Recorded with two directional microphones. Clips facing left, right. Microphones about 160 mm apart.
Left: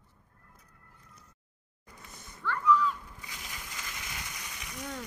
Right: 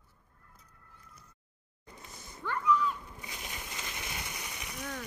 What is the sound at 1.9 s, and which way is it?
Splash, 20° right (ahead or behind).